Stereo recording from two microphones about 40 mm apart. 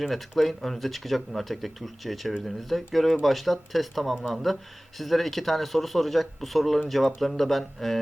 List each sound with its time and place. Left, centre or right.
0.1 s speech: centre